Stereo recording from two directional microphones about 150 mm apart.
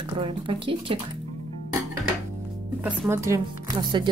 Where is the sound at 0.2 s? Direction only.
35° right (ahead or behind).